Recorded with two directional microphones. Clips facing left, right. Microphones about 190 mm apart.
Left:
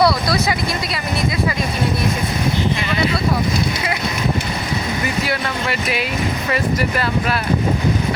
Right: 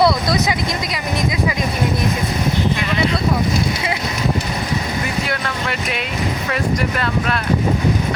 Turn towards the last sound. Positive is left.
turn(degrees=5)  # may be behind; listen again after turning